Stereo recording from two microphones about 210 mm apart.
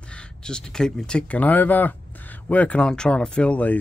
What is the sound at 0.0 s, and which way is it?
Speech, 5° left (ahead or behind).